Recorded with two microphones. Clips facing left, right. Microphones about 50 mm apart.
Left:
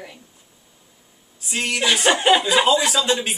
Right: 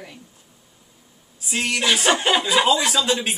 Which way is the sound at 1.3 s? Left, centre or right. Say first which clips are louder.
Even; centre.